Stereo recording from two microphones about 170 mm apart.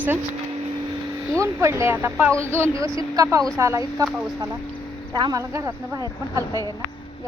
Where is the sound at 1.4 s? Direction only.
15° right (ahead or behind).